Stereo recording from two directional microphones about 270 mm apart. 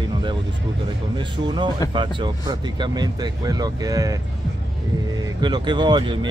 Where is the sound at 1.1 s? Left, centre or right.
Centre.